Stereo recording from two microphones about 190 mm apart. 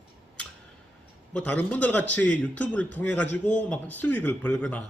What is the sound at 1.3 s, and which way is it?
A man's voice, 5° left (ahead or behind).